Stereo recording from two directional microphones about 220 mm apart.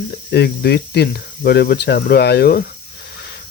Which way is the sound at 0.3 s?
50° left (ahead or behind).